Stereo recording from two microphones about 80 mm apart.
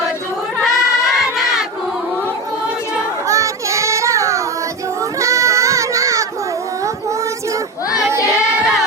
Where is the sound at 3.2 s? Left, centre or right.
Right.